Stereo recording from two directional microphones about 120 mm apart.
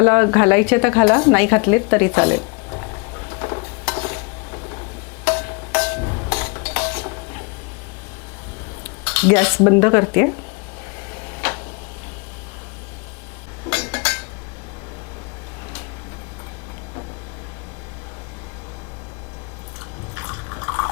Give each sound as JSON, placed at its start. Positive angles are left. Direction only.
{"t": 0.0, "sound": "a sound", "side_deg": 20}
{"t": 9.0, "sound": "cutlery", "side_deg": 20}
{"t": 11.1, "sound": "tick-tock", "side_deg": 20}
{"t": 13.7, "sound": "dishes", "side_deg": 20}
{"t": 20.1, "sound": "drip", "side_deg": 25}